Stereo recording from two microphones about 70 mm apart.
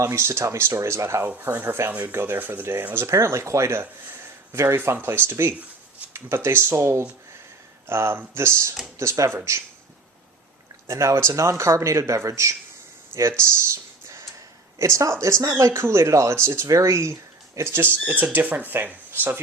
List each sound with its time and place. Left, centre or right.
0.0 s a man's voice: right
10.8 s a man's voice: right
14.8 s a man's voice: right
15.7 s speech: right